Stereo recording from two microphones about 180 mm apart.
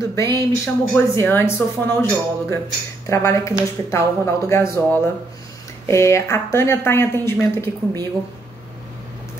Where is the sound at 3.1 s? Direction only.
15° left (ahead or behind).